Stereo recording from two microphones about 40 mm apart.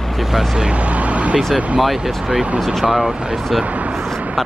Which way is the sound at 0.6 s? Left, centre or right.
Right.